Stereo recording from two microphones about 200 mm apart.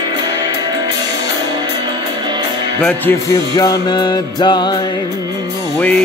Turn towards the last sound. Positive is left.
turn(degrees=5)  # may be behind; listen again after turning